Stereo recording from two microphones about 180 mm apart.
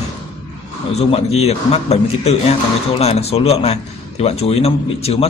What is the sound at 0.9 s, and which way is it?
A man's voice, 35° left (ahead or behind).